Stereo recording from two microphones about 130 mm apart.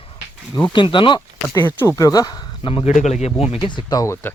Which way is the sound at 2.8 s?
60° left (ahead or behind).